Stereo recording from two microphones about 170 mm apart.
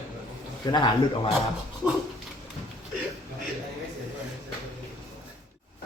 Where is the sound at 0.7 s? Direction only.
25° left (ahead or behind).